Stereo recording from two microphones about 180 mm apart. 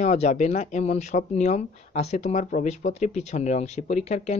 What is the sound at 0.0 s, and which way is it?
Speech, 40° left (ahead or behind).